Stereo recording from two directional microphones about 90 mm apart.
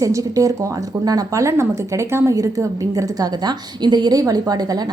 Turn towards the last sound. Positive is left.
turn(degrees=-45)  # may be behind; listen again after turning